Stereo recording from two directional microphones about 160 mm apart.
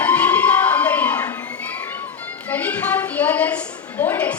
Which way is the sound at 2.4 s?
10° left (ahead or behind).